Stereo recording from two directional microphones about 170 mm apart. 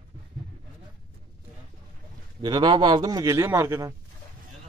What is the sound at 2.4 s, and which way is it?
A man's voice, 25° right (ahead or behind).